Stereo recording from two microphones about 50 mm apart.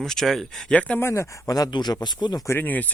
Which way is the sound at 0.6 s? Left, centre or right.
Left.